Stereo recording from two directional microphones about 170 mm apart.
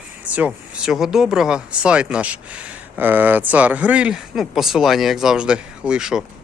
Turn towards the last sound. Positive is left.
turn(degrees=-5)  # may be behind; listen again after turning